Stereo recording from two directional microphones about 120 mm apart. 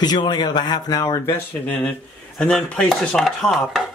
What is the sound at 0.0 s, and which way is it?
Speech, 35° left (ahead or behind).